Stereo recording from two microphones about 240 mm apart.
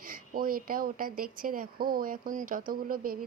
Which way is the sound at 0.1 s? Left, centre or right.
Right.